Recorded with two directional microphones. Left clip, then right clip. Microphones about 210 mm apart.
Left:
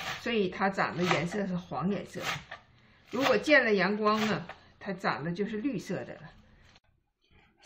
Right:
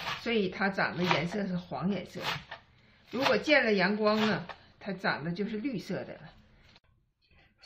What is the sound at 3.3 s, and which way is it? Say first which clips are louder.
A woman's voice: left 2 dB; 20° left (ahead or behind).